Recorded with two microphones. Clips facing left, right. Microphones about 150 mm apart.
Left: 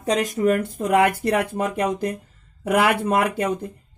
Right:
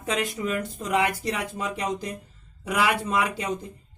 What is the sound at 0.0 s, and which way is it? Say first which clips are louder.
Speech: left 7 dB; 40° left (ahead or behind).